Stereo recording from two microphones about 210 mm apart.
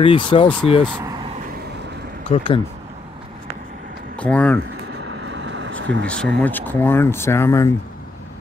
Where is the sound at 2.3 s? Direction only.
35° left (ahead or behind).